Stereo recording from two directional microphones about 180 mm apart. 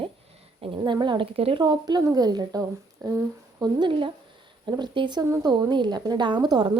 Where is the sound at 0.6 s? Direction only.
25° right (ahead or behind).